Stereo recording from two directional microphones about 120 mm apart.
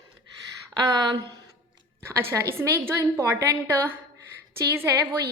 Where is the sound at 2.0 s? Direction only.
20° right (ahead or behind).